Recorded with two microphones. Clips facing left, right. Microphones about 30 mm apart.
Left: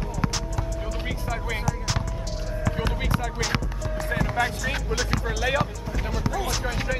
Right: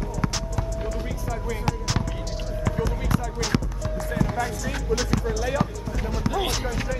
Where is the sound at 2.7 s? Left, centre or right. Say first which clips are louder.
Right 2 dB; left.